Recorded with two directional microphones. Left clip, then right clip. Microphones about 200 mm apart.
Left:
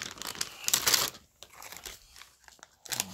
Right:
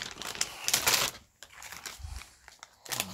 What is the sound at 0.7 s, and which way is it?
Typewriter, 25° left (ahead or behind).